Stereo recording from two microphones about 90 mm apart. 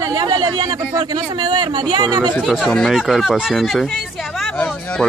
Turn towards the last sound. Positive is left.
turn(degrees=15)  # may be behind; listen again after turning